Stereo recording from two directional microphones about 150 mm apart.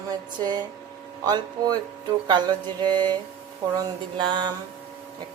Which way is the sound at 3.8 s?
30° right (ahead or behind).